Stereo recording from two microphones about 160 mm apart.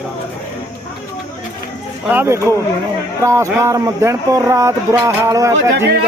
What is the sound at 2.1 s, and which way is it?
Speech, 15° right (ahead or behind).